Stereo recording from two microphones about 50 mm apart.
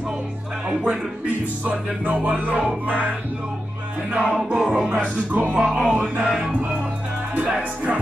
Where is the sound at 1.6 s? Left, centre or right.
Right.